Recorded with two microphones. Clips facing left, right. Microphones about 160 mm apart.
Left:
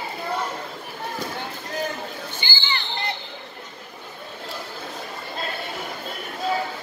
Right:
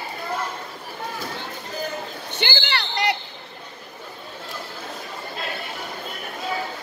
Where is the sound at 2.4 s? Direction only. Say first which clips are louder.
Right 8 dB; 75° right (ahead or behind).